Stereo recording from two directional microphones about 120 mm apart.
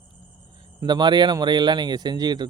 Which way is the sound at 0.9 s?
40° right (ahead or behind).